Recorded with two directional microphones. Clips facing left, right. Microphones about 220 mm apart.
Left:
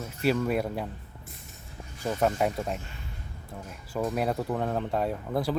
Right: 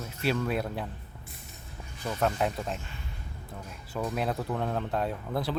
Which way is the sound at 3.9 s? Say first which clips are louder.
Left 3 dB; 5° left (ahead or behind).